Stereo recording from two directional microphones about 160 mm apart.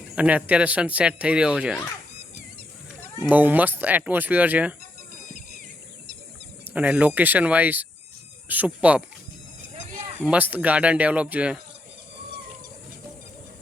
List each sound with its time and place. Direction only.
0.2 s speech: 10° right (ahead or behind)
3.2 s speech: 10° right (ahead or behind)
6.7 s speech: 10° right (ahead or behind)
9.7 s a sound: 50° right (ahead or behind)
10.2 s speech: 10° right (ahead or behind)